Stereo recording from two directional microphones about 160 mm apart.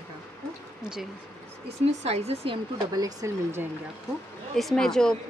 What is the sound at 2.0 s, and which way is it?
Speech, 40° right (ahead or behind).